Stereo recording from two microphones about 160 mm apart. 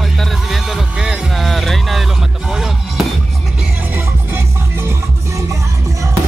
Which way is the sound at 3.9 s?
15° right (ahead or behind).